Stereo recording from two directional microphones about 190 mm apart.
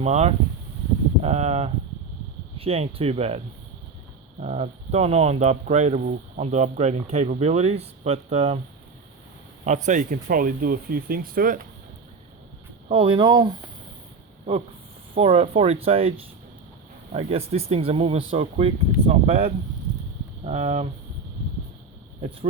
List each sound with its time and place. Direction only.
0.0 s speech: 35° right (ahead or behind)
9.6 s speech: 40° right (ahead or behind)
12.9 s speech: 25° right (ahead or behind)
15.1 s speech: 30° right (ahead or behind)